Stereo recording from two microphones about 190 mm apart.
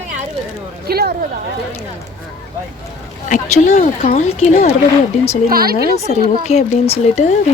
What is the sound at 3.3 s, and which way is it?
Speech, 40° left (ahead or behind).